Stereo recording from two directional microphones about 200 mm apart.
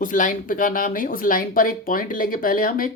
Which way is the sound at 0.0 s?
40° left (ahead or behind).